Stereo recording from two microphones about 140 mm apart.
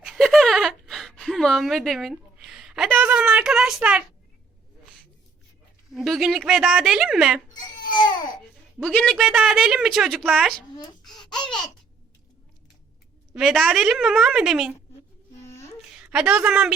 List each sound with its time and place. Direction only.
0.0 s a sound: 5° right (ahead or behind)
5.9 s a woman's voice: centre (ahead or behind)
7.9 s baby cry: 30° left (ahead or behind)
8.8 s a woman's voice: 5° left (ahead or behind)
11.0 s babbling: 5° left (ahead or behind)
13.3 s a woman's voice: centre (ahead or behind)
16.0 s a woman's voice: 5° right (ahead or behind)